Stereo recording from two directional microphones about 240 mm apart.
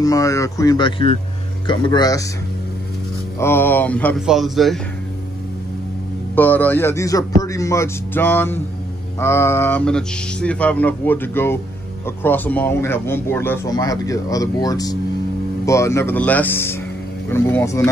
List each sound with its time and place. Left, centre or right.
0.0 s speech: centre
3.3 s speech: centre
6.3 s speech: centre